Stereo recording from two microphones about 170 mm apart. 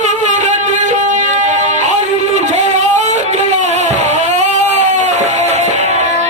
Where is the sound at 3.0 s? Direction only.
45° right (ahead or behind).